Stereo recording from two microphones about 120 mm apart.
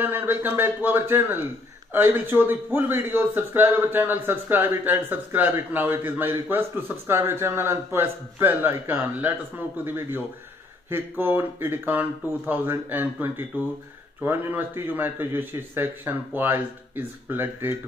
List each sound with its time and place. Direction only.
0.0 s a man's voice: 15° right (ahead or behind)